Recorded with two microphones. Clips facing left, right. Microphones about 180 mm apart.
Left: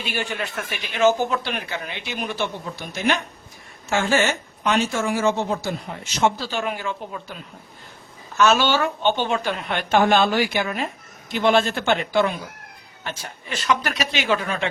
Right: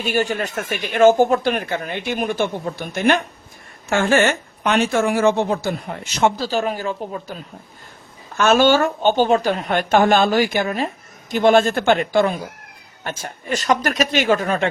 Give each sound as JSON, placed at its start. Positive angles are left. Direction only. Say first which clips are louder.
{"t": 0.0, "sound": "a woman's voice", "louder": "right 7 dB", "side_deg": -45}
{"t": 6.3, "sound": "a woman's voice", "louder": "right 5 dB", "side_deg": -40}